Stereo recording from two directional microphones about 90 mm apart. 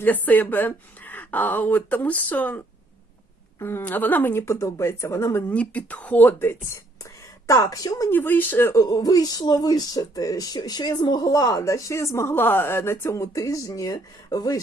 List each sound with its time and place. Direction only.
0.0 s speech: 20° left (ahead or behind)
3.6 s speech: 25° left (ahead or behind)
5.5 s speech: 15° left (ahead or behind)
6.7 s a sound: 35° left (ahead or behind)
8.1 s speech: 20° left (ahead or behind)
8.7 s speech: 45° left (ahead or behind)